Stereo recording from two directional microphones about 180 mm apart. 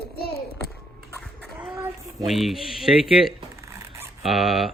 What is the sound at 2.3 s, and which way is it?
A woman's voice, centre (ahead or behind).